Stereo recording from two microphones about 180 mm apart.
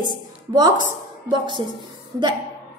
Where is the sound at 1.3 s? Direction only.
25° right (ahead or behind).